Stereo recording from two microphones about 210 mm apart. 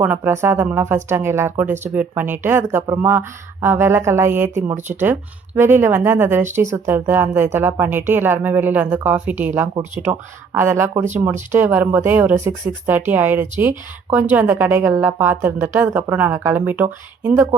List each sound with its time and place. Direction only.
0.0 s speech: 10° right (ahead or behind)